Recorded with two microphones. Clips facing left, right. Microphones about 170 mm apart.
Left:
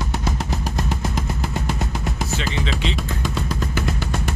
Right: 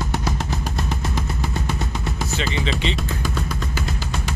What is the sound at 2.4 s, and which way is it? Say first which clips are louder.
Speech: right 4 dB; centre (ahead or behind).